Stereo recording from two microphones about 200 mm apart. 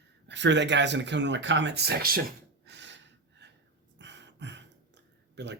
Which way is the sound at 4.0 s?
60° right (ahead or behind).